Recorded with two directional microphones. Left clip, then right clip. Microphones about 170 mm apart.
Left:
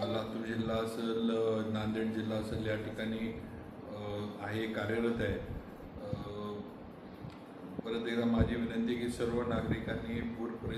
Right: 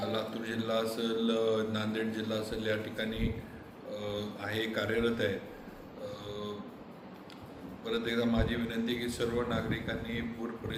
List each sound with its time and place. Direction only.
0.1 s a man's voice: 5° right (ahead or behind)
7.9 s a man's voice: 5° right (ahead or behind)